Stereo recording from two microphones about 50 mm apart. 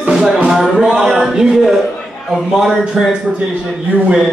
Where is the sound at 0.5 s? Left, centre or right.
Centre.